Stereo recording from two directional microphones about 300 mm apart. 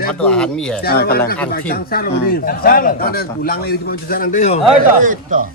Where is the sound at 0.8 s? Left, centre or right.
Left.